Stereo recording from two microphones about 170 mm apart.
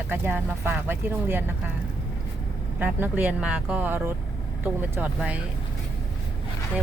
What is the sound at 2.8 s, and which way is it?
Speech, 10° right (ahead or behind).